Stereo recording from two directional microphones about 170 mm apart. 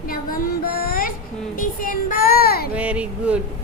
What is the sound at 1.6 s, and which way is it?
Child singing, 55° left (ahead or behind).